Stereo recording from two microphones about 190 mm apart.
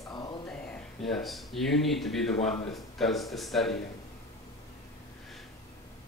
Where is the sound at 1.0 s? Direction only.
Centre (ahead or behind).